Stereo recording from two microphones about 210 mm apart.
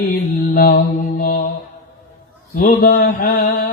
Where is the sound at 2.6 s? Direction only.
45° left (ahead or behind).